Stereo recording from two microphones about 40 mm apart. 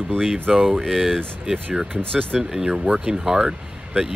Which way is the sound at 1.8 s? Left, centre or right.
Right.